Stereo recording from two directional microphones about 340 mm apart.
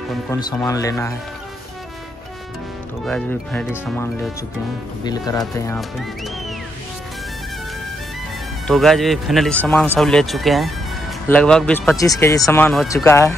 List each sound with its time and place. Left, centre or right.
0.1 s speech: centre
3.1 s speech: centre
5.4 s speech: centre
8.6 s speech: centre